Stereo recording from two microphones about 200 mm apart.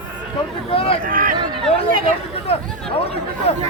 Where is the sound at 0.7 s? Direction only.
30° left (ahead or behind).